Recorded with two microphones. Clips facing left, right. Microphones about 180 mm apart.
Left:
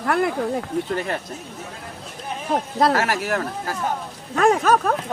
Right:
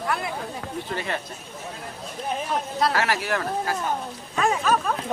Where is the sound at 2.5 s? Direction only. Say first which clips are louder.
Left 6 dB; 50° left (ahead or behind).